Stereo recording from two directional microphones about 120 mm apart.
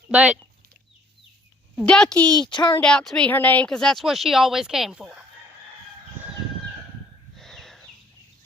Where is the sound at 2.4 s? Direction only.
40° left (ahead or behind).